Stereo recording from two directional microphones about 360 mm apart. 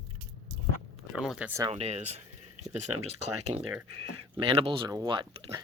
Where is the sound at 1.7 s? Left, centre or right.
Centre.